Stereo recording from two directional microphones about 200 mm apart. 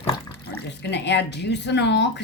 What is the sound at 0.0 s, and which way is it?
Water, 10° left (ahead or behind).